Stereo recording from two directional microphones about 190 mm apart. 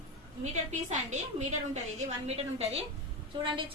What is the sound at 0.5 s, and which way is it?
A woman's voice, 40° right (ahead or behind).